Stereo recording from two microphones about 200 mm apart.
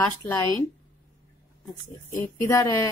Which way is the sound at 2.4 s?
15° left (ahead or behind).